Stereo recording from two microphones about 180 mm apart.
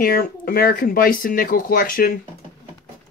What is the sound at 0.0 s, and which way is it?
Speech, 55° left (ahead or behind).